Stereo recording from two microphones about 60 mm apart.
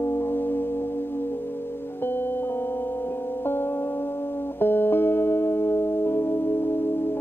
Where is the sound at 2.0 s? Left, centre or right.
Left.